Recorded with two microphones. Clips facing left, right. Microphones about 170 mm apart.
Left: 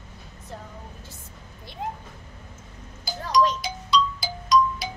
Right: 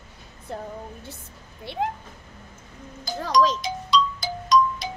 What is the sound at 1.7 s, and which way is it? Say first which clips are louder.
Speech: right 9 dB; 70° right (ahead or behind).